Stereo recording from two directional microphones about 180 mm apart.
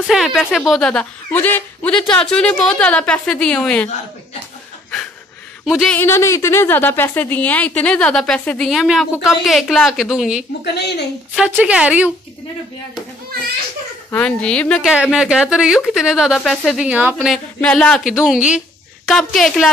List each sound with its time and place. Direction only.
0.0 s a woman's voice: centre (ahead or behind)
5.7 s a woman's voice: 5° left (ahead or behind)
10.6 s a woman's voice: 65° left (ahead or behind)
11.3 s a woman's voice: 5° right (ahead or behind)
14.1 s a woman's voice: 5° left (ahead or behind)